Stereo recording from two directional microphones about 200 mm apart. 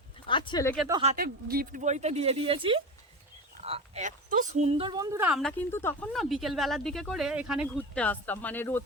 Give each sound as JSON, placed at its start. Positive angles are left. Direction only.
{"t": 0.3, "sound": "speech", "side_deg": 25}
{"t": 1.1, "sound": "speech", "side_deg": -50}
{"t": 5.1, "sound": "a woman's voice", "side_deg": -10}
{"t": 5.4, "sound": "a woman's voice", "side_deg": 5}
{"t": 6.1, "sound": "speech", "side_deg": 0}